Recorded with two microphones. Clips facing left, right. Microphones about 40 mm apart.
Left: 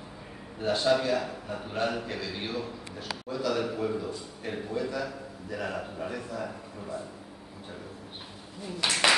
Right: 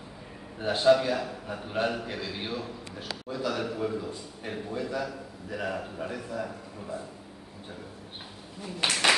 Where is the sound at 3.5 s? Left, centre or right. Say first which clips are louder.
Left 2 dB; centre.